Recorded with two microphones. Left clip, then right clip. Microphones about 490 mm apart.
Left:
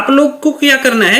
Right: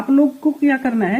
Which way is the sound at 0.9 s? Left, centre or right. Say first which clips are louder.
Left 10 dB; left.